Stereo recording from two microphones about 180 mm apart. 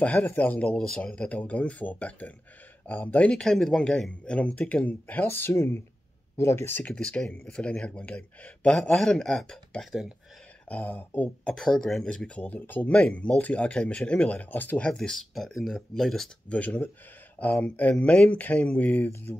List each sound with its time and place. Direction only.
0.0 s speech: 5° left (ahead or behind)